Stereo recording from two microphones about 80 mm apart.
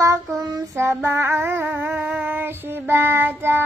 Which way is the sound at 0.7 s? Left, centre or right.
Right.